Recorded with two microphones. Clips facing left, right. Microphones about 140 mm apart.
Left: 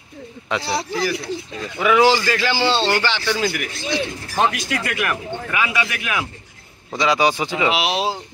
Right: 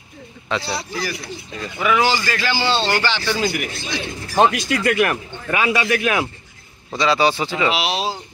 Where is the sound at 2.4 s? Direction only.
25° left (ahead or behind).